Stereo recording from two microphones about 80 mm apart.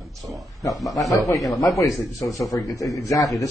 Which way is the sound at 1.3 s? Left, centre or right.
Centre.